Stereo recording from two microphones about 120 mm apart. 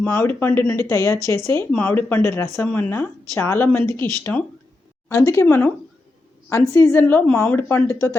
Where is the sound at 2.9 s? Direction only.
20° left (ahead or behind).